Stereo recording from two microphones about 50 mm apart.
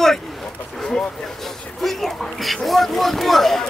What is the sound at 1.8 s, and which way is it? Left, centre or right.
Speech, centre.